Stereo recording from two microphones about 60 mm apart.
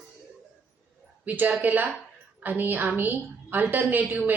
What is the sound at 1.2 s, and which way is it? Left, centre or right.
A woman's voice, right.